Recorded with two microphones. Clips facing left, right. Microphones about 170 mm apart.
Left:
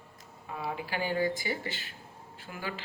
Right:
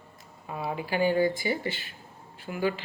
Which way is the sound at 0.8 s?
20° right (ahead or behind).